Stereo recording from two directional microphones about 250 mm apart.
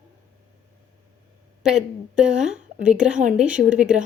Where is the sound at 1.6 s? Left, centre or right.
Centre.